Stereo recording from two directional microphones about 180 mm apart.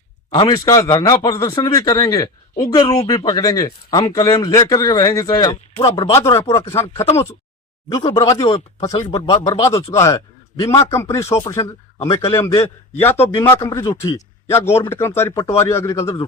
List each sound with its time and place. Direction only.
0.3 s speech: 20° left (ahead or behind)
5.7 s speech: 30° left (ahead or behind)
6.1 s a man's voice: 15° left (ahead or behind)